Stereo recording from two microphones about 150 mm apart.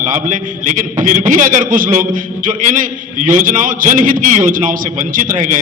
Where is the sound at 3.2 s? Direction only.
60° right (ahead or behind).